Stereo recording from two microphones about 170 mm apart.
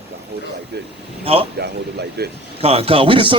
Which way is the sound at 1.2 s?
35° right (ahead or behind).